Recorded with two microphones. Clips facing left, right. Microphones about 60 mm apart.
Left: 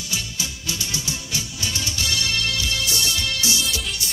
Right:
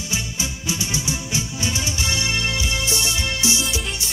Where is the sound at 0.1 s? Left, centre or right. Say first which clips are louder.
Right 2 dB; right.